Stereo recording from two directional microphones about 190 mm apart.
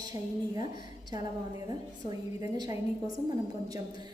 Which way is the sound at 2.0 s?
20° right (ahead or behind).